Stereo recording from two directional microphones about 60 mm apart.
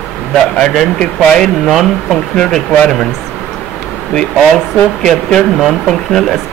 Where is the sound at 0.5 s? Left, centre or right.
Centre.